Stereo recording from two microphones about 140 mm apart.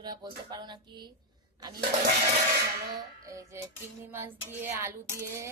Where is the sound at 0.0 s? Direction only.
30° right (ahead or behind).